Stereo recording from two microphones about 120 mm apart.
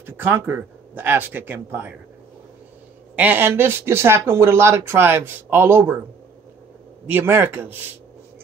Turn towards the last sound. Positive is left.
turn(degrees=-20)  # may be behind; listen again after turning